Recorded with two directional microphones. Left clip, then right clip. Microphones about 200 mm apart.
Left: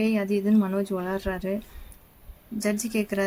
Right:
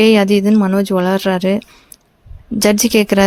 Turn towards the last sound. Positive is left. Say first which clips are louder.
# right 15 dB
turn(degrees=-45)  # may be behind; listen again after turning